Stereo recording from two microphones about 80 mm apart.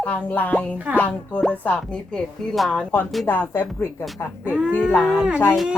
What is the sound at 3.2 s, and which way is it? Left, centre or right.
Speech, left.